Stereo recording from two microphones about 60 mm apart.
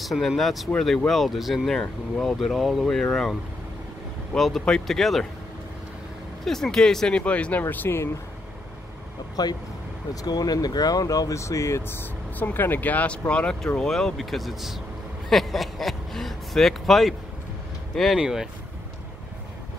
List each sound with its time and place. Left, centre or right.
0.0 s speech: centre
1.7 s speech: centre
2.9 s speech: centre
4.4 s speech: centre
6.4 s speech: centre
7.7 s speech: left
9.4 s speech: left
12.0 s speech: left
13.7 s speech: centre